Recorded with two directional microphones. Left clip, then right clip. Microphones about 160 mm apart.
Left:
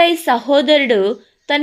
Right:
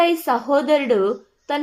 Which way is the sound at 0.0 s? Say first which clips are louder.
Left 5 dB; 35° left (ahead or behind).